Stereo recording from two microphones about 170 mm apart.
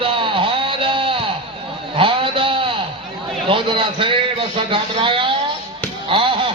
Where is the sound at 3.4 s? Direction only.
30° right (ahead or behind).